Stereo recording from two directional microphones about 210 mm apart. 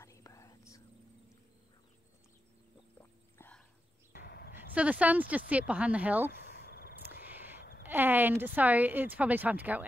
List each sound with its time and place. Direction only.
0.0 s whispering: 15° left (ahead or behind)
3.0 s whispering: 10° left (ahead or behind)
4.1 s a sound: 45° left (ahead or behind)
4.6 s speech: 5° right (ahead or behind)
6.3 s a sound: 50° left (ahead or behind)
7.8 s speech: 10° right (ahead or behind)